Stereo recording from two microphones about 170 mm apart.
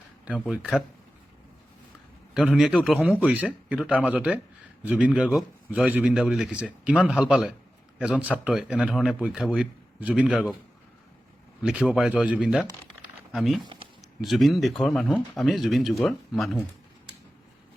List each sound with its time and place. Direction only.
0.4 s speech: 5° right (ahead or behind)
2.3 s a man's voice: 5° right (ahead or behind)
11.6 s speech: 5° right (ahead or behind)